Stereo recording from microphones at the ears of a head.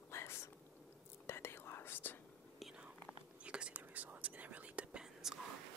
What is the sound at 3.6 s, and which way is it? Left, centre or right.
Whispering, right.